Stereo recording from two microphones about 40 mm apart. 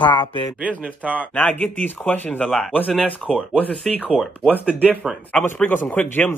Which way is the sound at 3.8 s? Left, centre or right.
Centre.